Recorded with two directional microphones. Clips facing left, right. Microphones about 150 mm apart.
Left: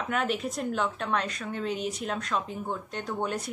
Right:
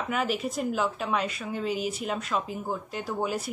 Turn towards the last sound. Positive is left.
turn(degrees=-5)  # may be behind; listen again after turning